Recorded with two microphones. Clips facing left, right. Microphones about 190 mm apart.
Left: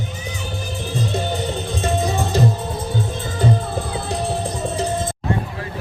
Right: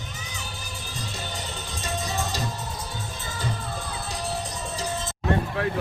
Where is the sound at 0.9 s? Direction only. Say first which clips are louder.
Left 14 dB; 60° left (ahead or behind).